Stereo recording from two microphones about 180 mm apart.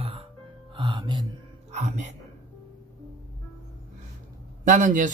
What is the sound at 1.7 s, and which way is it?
Speech, 40° right (ahead or behind).